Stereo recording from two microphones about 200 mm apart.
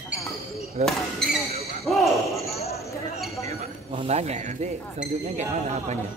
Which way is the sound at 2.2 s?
15° left (ahead or behind).